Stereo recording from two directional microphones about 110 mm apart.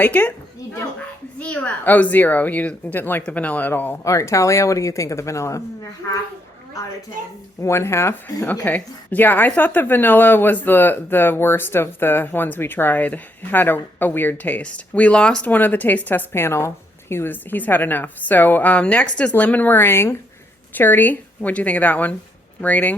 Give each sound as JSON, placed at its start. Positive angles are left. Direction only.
{"t": 0.0, "sound": "speech", "side_deg": 15}
{"t": 1.4, "sound": "speech", "side_deg": 15}
{"t": 4.0, "sound": "speech", "side_deg": 30}
{"t": 7.6, "sound": "speech", "side_deg": 25}